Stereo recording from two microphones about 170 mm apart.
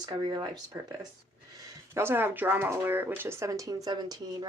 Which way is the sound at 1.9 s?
15° right (ahead or behind).